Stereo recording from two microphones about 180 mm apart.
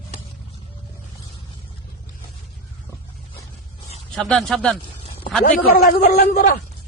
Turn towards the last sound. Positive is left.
turn(degrees=55)  # may be behind; listen again after turning